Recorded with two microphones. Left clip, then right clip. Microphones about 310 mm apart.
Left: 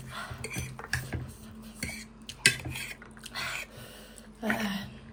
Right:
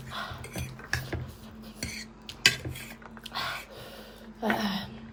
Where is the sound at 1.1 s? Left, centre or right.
Centre.